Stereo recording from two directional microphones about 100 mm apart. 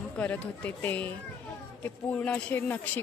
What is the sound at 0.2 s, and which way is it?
A woman's voice, 15° left (ahead or behind).